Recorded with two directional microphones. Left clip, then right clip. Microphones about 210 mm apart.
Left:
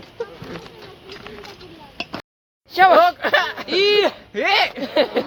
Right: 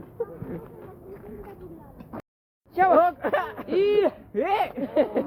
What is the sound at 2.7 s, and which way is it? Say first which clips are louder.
Speech: left 7 dB; 55° left (ahead or behind).